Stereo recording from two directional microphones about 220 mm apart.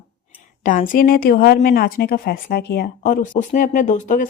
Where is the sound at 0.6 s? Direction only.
35° left (ahead or behind).